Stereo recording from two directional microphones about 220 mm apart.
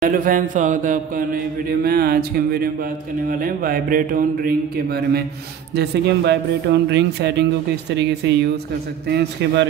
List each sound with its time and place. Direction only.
0.0 s speech: 40° right (ahead or behind)